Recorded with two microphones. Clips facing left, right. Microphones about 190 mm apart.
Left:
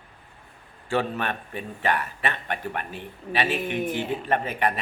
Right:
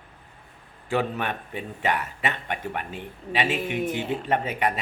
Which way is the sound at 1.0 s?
15° right (ahead or behind).